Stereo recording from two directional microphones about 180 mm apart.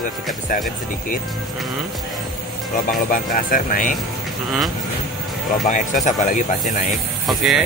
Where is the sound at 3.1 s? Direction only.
50° left (ahead or behind).